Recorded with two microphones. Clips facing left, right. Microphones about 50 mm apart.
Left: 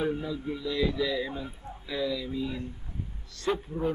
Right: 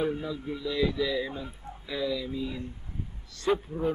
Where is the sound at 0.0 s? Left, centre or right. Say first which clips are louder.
Even; centre.